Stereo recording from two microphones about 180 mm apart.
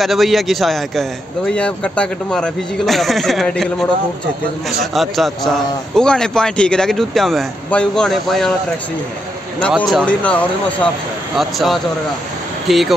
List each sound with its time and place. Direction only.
0.0 s speech: centre (ahead or behind)
9.6 s speech: 5° left (ahead or behind)